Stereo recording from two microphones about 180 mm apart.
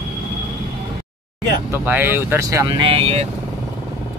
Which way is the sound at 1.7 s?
10° right (ahead or behind).